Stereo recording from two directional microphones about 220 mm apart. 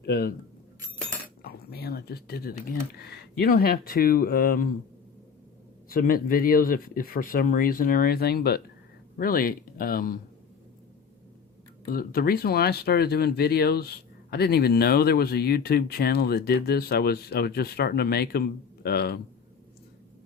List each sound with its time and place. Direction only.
0.0 s speech: 45° left (ahead or behind)
1.4 s speech: 45° left (ahead or behind)
5.9 s speech: 40° left (ahead or behind)
11.9 s speech: 40° left (ahead or behind)